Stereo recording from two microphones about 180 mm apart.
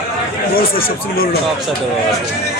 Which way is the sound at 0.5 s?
55° left (ahead or behind).